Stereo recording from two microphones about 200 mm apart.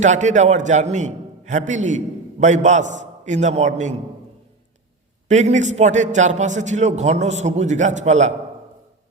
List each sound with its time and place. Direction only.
0.0 s a man's voice: 35° right (ahead or behind)
5.3 s a man's voice: 35° right (ahead or behind)